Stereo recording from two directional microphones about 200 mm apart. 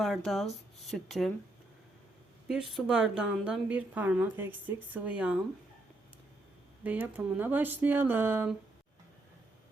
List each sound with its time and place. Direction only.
0.0 s a woman's voice: centre (ahead or behind)
2.5 s a woman's voice: centre (ahead or behind)
6.8 s speech: 10° right (ahead or behind)